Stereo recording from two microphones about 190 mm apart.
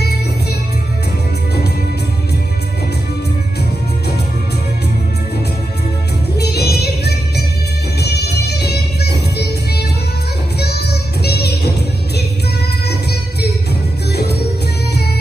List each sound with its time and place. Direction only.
6.3 s music: 60° left (ahead or behind)